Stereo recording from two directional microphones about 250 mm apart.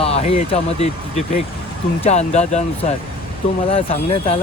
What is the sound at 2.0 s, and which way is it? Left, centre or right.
Speech, left.